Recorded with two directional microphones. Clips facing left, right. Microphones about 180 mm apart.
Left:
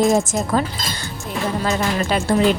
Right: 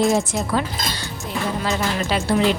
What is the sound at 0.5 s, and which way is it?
Speech, 45° left (ahead or behind).